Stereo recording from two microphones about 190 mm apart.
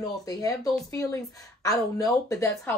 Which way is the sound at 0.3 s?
15° left (ahead or behind).